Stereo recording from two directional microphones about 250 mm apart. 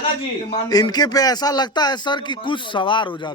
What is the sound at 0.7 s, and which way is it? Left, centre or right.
A man's voice, centre.